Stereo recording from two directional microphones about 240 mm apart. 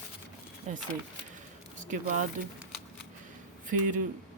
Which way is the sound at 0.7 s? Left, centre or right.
Right.